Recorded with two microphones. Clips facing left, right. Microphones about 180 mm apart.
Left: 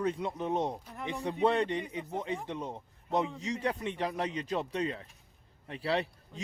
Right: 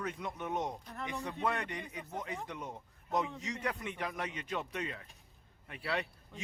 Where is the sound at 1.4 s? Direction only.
30° left (ahead or behind).